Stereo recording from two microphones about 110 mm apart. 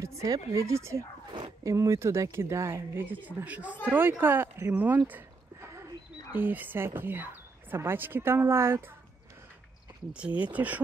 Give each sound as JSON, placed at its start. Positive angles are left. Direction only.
{"t": 0.0, "sound": "speech", "side_deg": -30}
{"t": 10.1, "sound": "speech", "side_deg": -10}